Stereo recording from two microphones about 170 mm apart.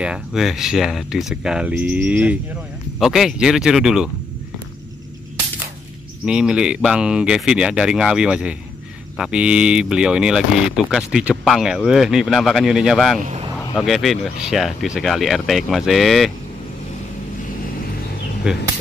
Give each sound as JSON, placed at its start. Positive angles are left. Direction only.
{"t": 0.0, "sound": "speech", "side_deg": -5}
{"t": 6.2, "sound": "speech", "side_deg": -5}
{"t": 13.2, "sound": "speech", "side_deg": -40}
{"t": 13.7, "sound": "speech", "side_deg": 0}
{"t": 18.5, "sound": "speech", "side_deg": -5}